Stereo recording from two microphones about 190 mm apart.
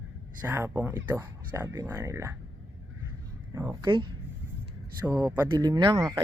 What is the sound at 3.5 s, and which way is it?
Speech, 20° right (ahead or behind).